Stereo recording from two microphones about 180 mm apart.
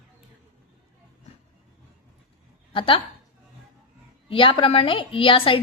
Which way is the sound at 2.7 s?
30° left (ahead or behind).